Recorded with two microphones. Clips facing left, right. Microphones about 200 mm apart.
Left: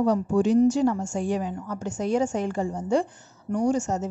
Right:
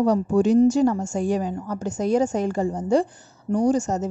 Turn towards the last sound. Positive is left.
turn(degrees=-40)  # may be behind; listen again after turning